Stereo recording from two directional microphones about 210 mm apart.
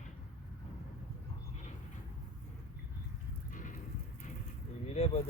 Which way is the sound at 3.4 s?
40° left (ahead or behind).